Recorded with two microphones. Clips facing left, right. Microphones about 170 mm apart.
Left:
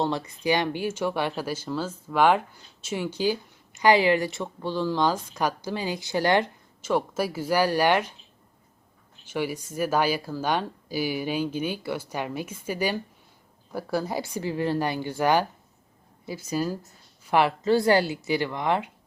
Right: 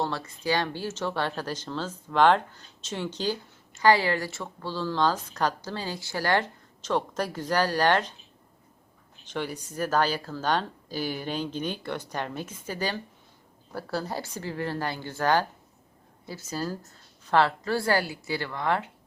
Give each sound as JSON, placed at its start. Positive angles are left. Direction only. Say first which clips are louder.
{"t": 0.0, "sound": "speech", "louder": "left 4 dB", "side_deg": 15}
{"t": 9.2, "sound": "speech", "louder": "left 4 dB", "side_deg": 10}